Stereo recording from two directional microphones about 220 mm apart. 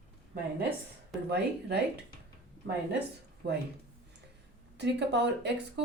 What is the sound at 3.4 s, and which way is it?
Speech, 50° right (ahead or behind).